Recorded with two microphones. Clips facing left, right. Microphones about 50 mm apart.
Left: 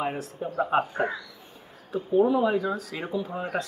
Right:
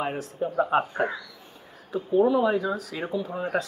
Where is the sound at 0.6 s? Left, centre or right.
Centre.